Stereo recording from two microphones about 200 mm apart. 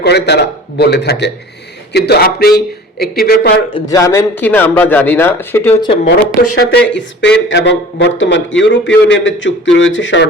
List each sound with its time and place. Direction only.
0.0 s speech: 55° left (ahead or behind)
3.8 s a man's voice: 15° left (ahead or behind)
6.6 s speech: 60° left (ahead or behind)